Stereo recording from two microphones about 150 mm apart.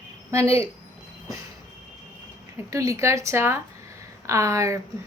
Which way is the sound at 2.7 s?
20° right (ahead or behind).